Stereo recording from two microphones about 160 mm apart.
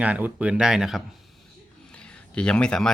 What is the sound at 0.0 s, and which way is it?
Speech, 10° right (ahead or behind).